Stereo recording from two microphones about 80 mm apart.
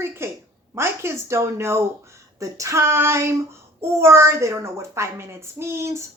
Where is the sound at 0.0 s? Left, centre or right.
Right.